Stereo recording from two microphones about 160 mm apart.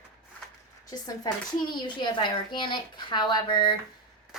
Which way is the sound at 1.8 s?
30° left (ahead or behind).